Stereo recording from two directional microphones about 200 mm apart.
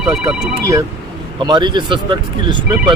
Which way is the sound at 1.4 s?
20° right (ahead or behind).